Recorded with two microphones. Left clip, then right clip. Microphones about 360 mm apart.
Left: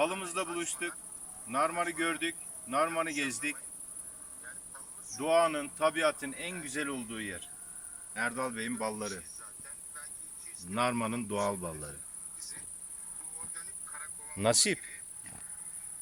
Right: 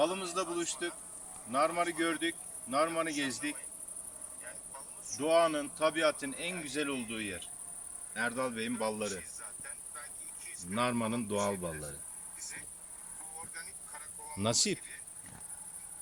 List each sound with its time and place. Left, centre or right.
0.0 s speech: centre
5.2 s speech: centre
10.7 s speech: centre
14.3 s insect: centre